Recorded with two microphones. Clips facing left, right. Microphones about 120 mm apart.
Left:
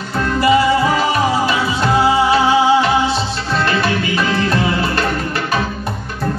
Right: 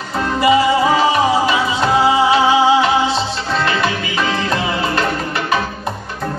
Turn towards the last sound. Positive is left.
turn(degrees=-25)  # may be behind; listen again after turning